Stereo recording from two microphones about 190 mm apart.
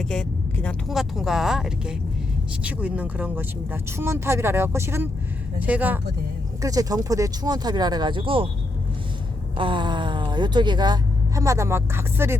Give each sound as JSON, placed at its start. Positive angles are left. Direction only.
{"t": 0.0, "sound": "speech", "side_deg": 5}
{"t": 6.6, "sound": "speech", "side_deg": -20}
{"t": 9.6, "sound": "speech", "side_deg": -25}